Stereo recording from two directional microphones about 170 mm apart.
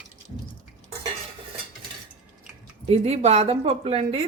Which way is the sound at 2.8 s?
40° right (ahead or behind).